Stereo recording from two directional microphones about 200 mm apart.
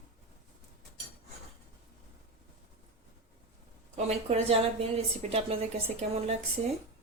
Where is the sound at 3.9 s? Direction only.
30° right (ahead or behind).